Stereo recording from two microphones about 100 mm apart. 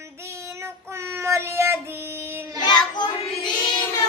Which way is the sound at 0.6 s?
30° right (ahead or behind).